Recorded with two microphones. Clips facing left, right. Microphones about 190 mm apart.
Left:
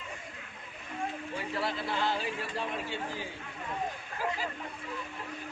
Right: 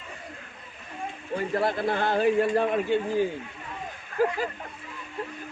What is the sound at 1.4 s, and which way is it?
A man's voice, 50° right (ahead or behind).